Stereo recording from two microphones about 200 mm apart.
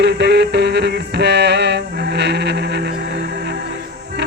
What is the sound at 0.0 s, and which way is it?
Music, 60° right (ahead or behind).